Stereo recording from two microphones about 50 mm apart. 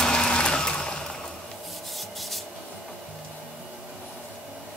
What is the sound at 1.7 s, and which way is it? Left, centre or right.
Rub, centre.